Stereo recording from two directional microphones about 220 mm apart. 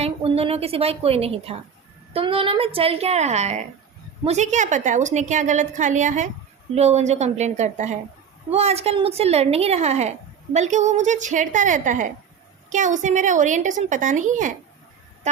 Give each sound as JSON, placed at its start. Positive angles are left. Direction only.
{"t": 0.0, "sound": "a woman's voice", "side_deg": -25}